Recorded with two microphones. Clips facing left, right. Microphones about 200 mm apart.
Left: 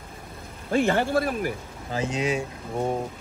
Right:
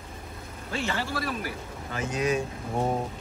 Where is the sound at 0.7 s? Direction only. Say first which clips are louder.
Left 9 dB; 50° left (ahead or behind).